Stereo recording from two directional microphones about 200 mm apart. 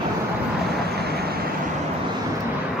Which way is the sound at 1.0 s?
50° right (ahead or behind).